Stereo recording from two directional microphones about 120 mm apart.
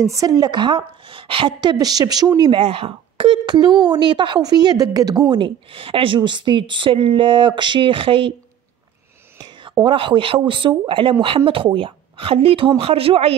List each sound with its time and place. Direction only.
0.0 s speech: 30° right (ahead or behind)
5.4 s speech: 50° right (ahead or behind)
9.4 s whispering: 40° right (ahead or behind)
9.8 s speech: 45° right (ahead or behind)